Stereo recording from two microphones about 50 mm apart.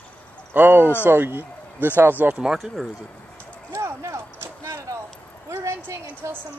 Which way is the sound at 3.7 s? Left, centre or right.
Right.